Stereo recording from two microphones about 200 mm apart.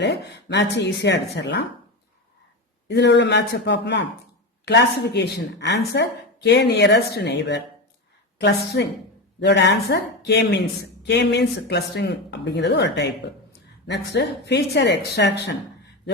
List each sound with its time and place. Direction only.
0.0 s a woman's voice: 60° left (ahead or behind)
2.9 s a woman's voice: 60° left (ahead or behind)